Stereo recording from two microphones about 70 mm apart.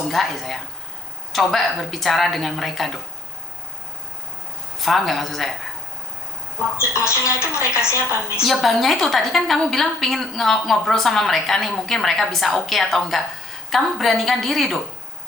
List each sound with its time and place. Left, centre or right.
0.1 s a woman's voice: centre
4.8 s a woman's voice: centre
6.7 s speech: left
8.4 s a woman's voice: centre